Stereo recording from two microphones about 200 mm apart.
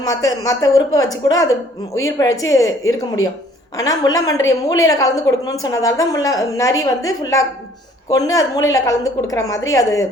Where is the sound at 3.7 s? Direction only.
15° left (ahead or behind).